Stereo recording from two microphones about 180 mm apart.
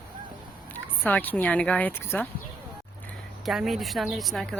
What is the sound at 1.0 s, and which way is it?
Speech, 10° left (ahead or behind).